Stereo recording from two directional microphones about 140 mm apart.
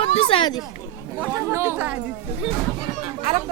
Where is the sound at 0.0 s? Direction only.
40° left (ahead or behind).